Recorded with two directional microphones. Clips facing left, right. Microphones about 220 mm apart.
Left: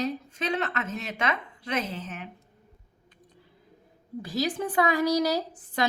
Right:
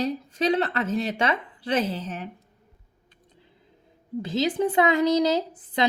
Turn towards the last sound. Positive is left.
turn(degrees=-20)  # may be behind; listen again after turning